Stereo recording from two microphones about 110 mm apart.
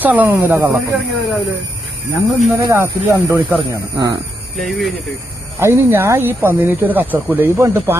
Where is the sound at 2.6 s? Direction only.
30° right (ahead or behind).